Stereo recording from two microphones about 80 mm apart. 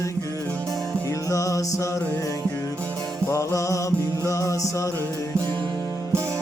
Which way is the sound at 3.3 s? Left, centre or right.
Left.